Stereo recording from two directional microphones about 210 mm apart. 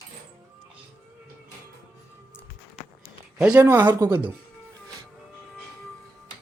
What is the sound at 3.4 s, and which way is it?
Speech, 10° right (ahead or behind).